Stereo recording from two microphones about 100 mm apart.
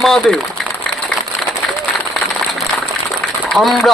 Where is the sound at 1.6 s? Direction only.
5° left (ahead or behind).